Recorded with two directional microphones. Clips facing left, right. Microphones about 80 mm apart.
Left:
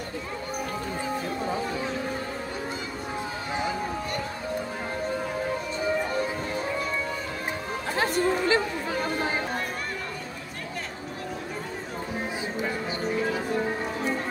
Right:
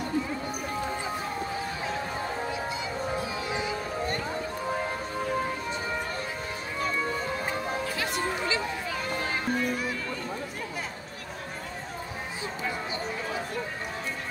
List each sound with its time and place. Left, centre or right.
7.9 s music: left